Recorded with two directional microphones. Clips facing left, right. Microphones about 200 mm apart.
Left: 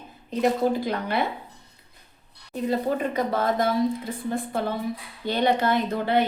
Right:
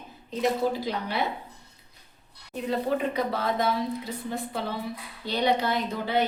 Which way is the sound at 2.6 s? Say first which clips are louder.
Left 2 dB; 45° left (ahead or behind).